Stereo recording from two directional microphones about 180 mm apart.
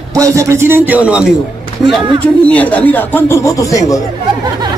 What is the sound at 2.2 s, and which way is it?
Speech, 10° left (ahead or behind).